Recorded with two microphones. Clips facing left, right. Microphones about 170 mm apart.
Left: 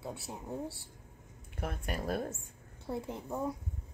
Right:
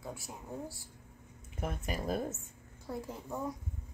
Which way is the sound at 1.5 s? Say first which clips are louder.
Even; 5° right (ahead or behind).